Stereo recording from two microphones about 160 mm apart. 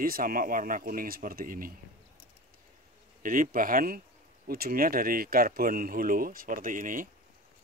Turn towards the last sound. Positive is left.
turn(degrees=-55)  # may be behind; listen again after turning